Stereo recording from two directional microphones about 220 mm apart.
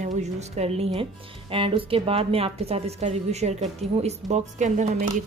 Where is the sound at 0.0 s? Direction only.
30° right (ahead or behind).